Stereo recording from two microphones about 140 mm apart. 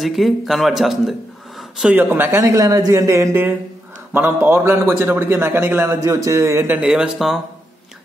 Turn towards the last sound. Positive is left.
turn(degrees=0)  # may be behind; listen again after turning